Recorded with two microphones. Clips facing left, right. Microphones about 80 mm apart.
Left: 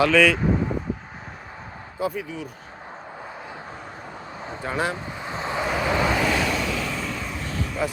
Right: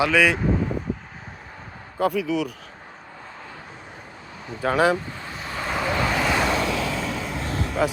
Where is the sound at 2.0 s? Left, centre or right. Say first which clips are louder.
Right 6 dB; right.